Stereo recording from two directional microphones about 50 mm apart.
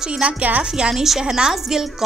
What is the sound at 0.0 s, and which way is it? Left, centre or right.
Speech, centre.